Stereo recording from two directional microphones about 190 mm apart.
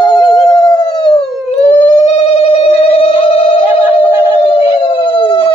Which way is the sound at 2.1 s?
30° left (ahead or behind).